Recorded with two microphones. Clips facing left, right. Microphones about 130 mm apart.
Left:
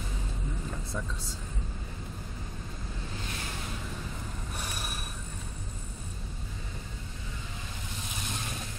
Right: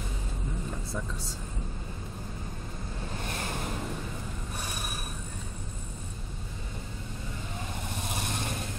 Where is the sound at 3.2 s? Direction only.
50° right (ahead or behind).